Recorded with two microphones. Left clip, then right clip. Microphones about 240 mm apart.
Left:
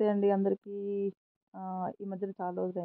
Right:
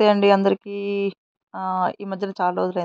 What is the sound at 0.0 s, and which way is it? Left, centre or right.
Speech, right.